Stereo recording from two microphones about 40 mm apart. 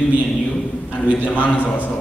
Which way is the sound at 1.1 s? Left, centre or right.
Left.